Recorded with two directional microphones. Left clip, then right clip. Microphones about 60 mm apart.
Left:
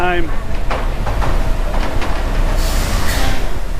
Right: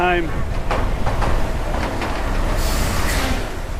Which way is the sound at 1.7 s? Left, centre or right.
Right.